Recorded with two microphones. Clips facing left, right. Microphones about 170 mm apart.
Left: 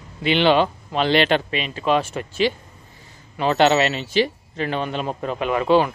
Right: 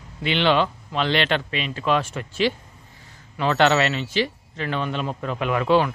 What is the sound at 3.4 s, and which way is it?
Speech, 15° left (ahead or behind).